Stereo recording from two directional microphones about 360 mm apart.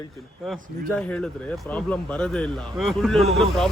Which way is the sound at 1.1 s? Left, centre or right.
Centre.